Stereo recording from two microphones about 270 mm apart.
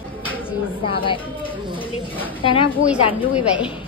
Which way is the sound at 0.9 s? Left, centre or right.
Centre.